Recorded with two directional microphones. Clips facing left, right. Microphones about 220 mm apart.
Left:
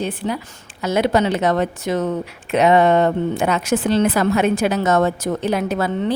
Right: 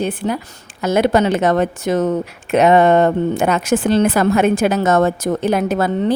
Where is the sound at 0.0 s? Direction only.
50° right (ahead or behind).